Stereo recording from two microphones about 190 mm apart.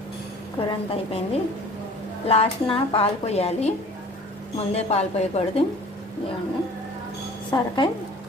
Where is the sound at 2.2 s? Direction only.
30° left (ahead or behind).